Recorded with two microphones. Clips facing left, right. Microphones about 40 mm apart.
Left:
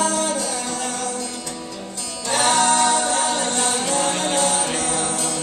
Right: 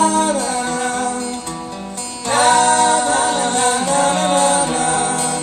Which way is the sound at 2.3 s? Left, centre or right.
Right.